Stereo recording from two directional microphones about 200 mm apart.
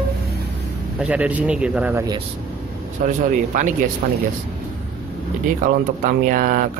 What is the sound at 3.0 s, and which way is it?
Speech, 40° right (ahead or behind).